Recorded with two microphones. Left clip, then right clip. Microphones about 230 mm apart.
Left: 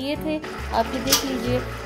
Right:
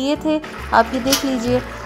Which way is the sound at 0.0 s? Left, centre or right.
Right.